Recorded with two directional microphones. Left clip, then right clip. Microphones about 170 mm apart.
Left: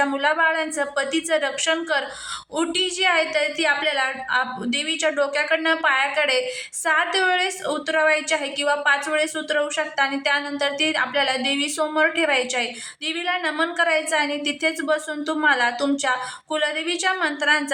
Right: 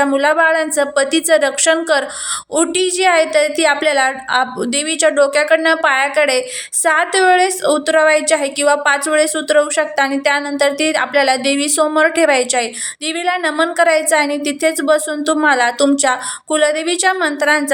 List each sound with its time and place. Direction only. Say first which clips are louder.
0.0 s a woman's voice: right 7 dB; 30° right (ahead or behind)